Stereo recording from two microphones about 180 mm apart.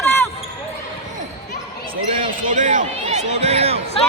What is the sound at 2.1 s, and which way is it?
Basketball bounce, 40° right (ahead or behind).